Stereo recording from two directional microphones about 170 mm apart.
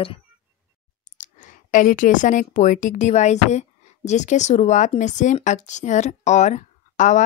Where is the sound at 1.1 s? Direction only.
45° left (ahead or behind).